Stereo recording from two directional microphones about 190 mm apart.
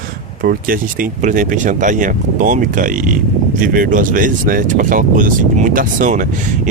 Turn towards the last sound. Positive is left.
turn(degrees=-45)  # may be behind; listen again after turning